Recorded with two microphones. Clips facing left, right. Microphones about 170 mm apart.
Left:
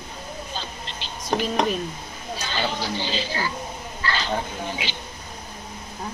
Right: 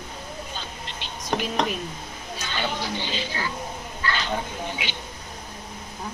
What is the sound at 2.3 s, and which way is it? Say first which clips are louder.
Speech: left 2 dB; 35° left (ahead or behind).